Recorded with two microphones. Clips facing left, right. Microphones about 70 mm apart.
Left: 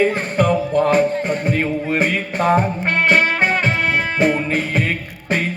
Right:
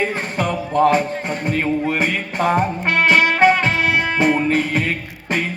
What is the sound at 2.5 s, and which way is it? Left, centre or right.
Music, centre.